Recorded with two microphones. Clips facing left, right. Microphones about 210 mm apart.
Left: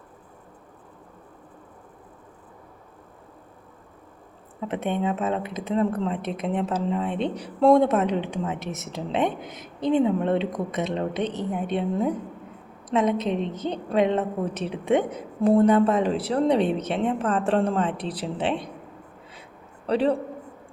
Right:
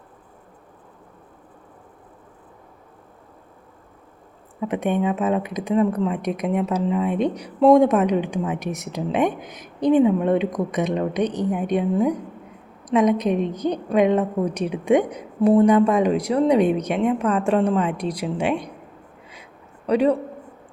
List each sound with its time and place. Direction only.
4.7 s a woman's voice: 15° right (ahead or behind)